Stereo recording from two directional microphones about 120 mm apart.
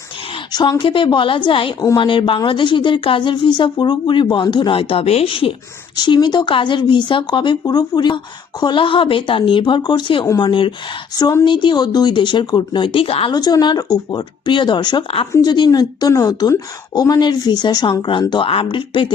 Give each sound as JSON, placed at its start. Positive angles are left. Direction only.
{"t": 0.5, "sound": "a woman's voice", "side_deg": 35}
{"t": 6.0, "sound": "a woman's voice", "side_deg": 40}
{"t": 11.4, "sound": "a woman's voice", "side_deg": 40}
{"t": 13.3, "sound": "a woman's voice", "side_deg": 35}
{"t": 15.0, "sound": "a woman's voice", "side_deg": 50}
{"t": 15.4, "sound": "a woman's voice", "side_deg": 35}